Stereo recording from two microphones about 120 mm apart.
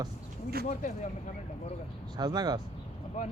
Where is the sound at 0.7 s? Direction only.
90° left.